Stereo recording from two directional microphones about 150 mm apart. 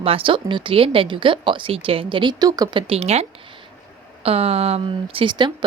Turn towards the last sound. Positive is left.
turn(degrees=-30)  # may be behind; listen again after turning